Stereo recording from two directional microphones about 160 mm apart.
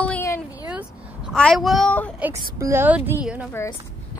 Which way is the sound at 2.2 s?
20° right (ahead or behind).